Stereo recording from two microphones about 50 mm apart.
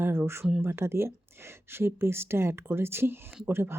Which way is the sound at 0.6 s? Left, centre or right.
Right.